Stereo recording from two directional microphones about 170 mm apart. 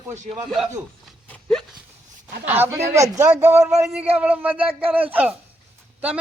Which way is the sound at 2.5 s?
10° right (ahead or behind).